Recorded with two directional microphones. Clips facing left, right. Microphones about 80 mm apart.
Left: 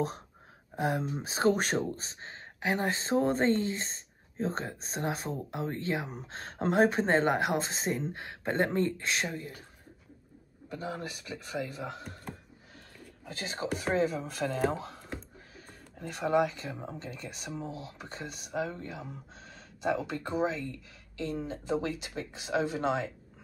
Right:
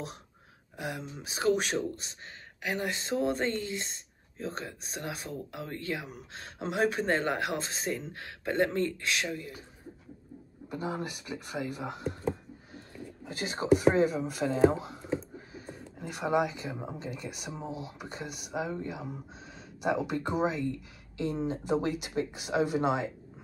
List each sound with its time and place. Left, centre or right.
0.7 s speech: left
10.7 s speech: right
13.2 s speech: centre
13.8 s speech: centre